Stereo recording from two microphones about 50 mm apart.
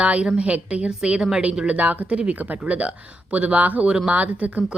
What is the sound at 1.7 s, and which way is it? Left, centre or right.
A woman's voice, right.